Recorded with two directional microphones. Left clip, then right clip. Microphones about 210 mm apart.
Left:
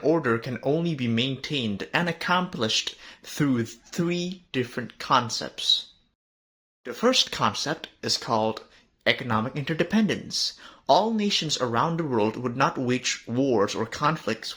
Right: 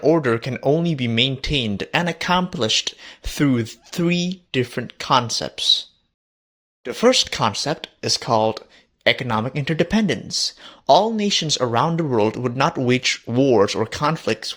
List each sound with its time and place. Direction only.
0.0 s speech: 30° right (ahead or behind)
6.8 s speech: 35° right (ahead or behind)